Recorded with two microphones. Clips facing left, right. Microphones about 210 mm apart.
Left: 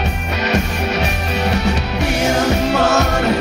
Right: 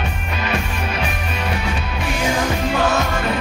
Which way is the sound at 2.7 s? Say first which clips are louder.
Left 4 dB; 70° left (ahead or behind).